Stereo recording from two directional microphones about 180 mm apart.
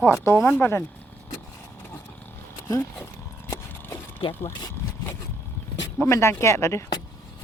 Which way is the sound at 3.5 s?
15° left (ahead or behind).